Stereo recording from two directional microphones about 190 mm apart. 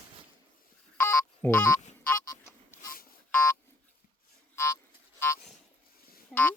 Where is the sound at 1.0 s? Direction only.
15° left (ahead or behind).